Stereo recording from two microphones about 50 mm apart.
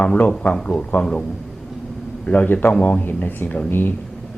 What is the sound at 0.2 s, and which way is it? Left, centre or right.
Speech, left.